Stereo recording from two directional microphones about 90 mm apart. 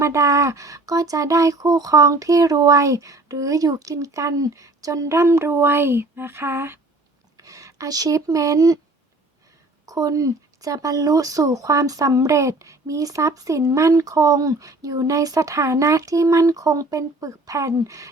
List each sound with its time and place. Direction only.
0.0 s speech: 35° right (ahead or behind)
7.3 s speech: 40° right (ahead or behind)
9.8 s speech: 40° right (ahead or behind)